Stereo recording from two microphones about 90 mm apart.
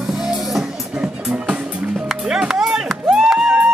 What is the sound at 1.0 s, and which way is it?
Music, 15° right (ahead or behind).